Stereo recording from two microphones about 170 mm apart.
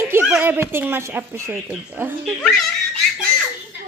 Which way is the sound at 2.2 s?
Centre (ahead or behind).